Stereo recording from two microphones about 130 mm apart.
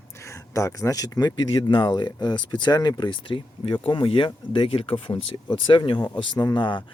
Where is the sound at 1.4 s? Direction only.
40° left (ahead or behind).